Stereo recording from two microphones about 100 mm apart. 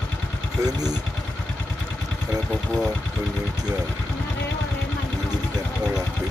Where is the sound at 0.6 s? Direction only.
40° right (ahead or behind).